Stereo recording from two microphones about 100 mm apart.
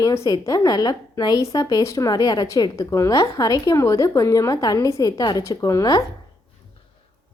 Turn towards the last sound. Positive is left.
turn(degrees=40)  # may be behind; listen again after turning